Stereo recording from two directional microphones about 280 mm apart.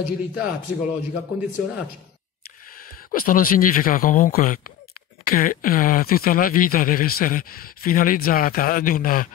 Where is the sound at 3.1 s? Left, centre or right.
Left.